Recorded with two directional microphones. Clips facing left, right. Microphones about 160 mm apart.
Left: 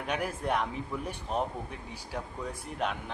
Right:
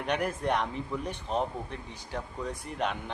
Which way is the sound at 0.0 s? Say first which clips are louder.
Right 3 dB; 5° left (ahead or behind).